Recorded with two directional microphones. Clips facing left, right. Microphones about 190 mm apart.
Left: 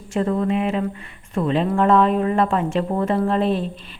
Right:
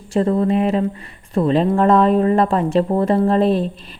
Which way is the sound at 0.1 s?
35° right (ahead or behind).